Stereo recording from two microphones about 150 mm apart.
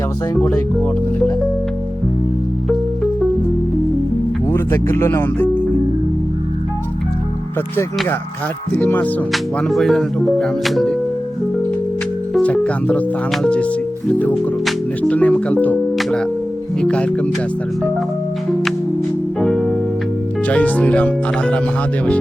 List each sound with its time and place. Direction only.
0.4 s speech: 10° left (ahead or behind)
4.4 s speech: 15° left (ahead or behind)
8.7 s speech: 10° left (ahead or behind)
9.3 s speech: centre (ahead or behind)
12.3 s speech: 10° left (ahead or behind)
16.8 s speech: 5° left (ahead or behind)
19.4 s music: centre (ahead or behind)
20.5 s speech: 10° left (ahead or behind)